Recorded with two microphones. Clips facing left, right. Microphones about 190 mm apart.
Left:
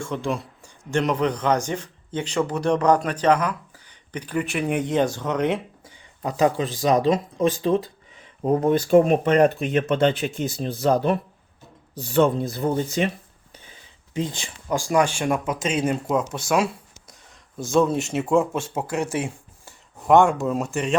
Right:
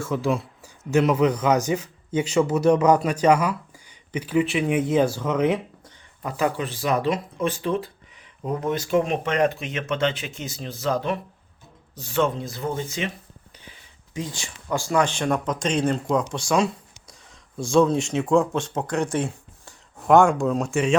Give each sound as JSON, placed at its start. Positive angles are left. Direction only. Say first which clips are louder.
{"t": 0.0, "sound": "speech", "louder": "right 3 dB", "side_deg": -5}
{"t": 6.2, "sound": "speech", "louder": "left 4 dB", "side_deg": 25}
{"t": 10.7, "sound": "speech", "louder": "left 4 dB", "side_deg": 60}
{"t": 10.9, "sound": "speech", "louder": "left 4 dB", "side_deg": 40}
{"t": 14.1, "sound": "speech", "louder": "left 4 dB", "side_deg": 25}